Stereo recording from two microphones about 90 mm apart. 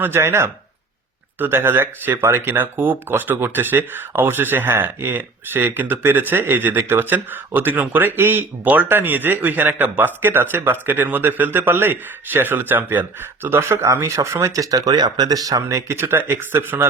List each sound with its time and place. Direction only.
0.0 s speech: 25° right (ahead or behind); by 15.8 s 40° right (ahead or behind)
15.9 s speech: 30° right (ahead or behind)